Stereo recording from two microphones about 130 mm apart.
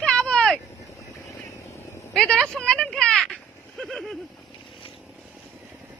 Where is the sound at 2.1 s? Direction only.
5° left (ahead or behind).